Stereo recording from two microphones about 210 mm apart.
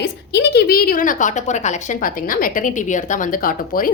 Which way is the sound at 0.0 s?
50° left (ahead or behind).